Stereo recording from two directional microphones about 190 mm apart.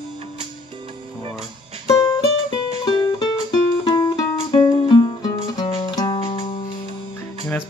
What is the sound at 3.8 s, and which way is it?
Music, 20° left (ahead or behind).